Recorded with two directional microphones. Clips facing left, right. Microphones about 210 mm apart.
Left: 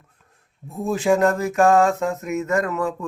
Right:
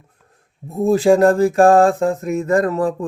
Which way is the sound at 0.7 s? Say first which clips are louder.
Right 6 dB; 35° right (ahead or behind).